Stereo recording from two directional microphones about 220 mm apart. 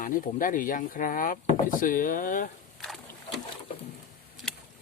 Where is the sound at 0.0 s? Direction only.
40° left (ahead or behind).